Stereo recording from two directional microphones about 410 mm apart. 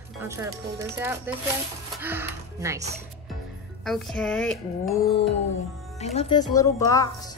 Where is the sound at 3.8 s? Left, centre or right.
Centre.